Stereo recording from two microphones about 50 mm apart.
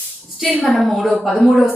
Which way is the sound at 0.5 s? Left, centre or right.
Left.